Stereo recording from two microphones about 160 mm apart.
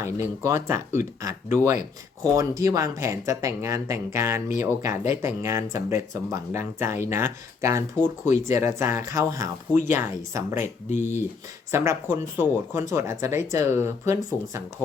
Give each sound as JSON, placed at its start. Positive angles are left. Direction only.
{"t": 0.0, "sound": "speech", "side_deg": -15}
{"t": 10.8, "sound": "speech", "side_deg": 50}
{"t": 11.7, "sound": "speech", "side_deg": -15}